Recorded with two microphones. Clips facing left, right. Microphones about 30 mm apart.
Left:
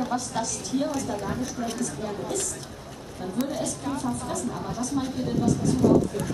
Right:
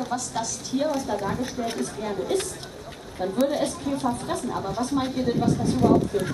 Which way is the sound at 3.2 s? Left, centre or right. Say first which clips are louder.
Right 5 dB; right.